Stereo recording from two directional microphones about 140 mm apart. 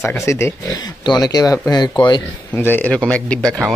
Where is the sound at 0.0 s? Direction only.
20° left (ahead or behind).